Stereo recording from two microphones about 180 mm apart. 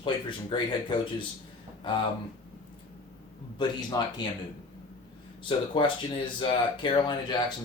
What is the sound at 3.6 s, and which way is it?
Speech, 25° left (ahead or behind).